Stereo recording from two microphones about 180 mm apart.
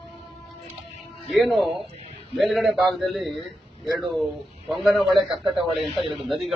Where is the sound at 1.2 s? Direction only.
Centre (ahead or behind).